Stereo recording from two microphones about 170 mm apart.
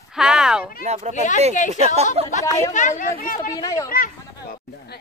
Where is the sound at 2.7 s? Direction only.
45° left (ahead or behind).